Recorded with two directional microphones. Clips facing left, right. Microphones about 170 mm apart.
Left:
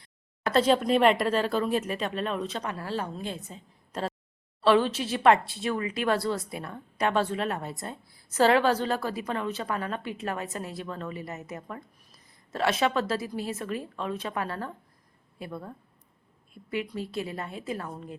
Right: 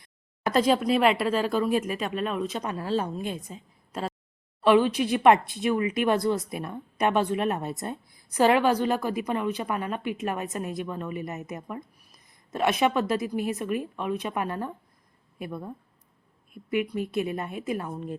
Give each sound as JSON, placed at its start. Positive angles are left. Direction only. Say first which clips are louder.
{"t": 0.0, "sound": "a woman's voice", "louder": "right 2 dB", "side_deg": -15}